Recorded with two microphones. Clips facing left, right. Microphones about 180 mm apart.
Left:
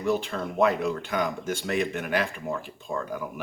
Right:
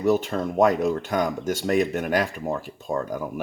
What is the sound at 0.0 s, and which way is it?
Speech, 45° right (ahead or behind).